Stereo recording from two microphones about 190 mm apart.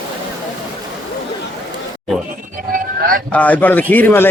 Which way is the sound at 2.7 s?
50° right (ahead or behind).